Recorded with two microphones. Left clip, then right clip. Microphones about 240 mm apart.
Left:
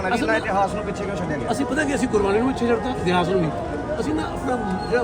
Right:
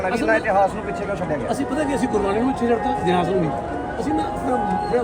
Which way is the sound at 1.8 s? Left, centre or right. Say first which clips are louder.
Right 2 dB; centre.